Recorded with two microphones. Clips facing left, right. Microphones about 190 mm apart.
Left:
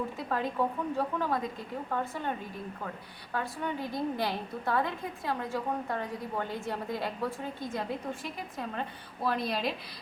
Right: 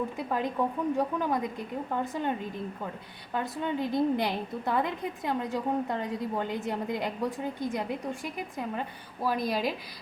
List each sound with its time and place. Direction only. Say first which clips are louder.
0.3 s a woman's voice: even; 15° right (ahead or behind)
3.3 s a woman's voice: right 3 dB; 20° right (ahead or behind)